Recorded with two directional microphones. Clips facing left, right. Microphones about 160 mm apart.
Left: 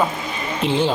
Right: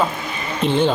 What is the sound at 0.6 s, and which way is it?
Speech, 55° right (ahead or behind).